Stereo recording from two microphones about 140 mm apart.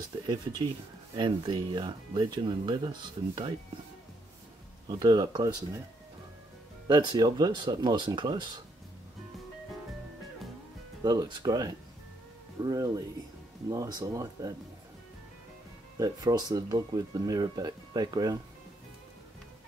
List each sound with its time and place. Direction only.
0.3 s speech: 30° right (ahead or behind)
4.8 s speech: 30° right (ahead or behind)
6.9 s speech: 30° right (ahead or behind)
11.0 s speech: 30° right (ahead or behind)
16.0 s speech: 25° right (ahead or behind)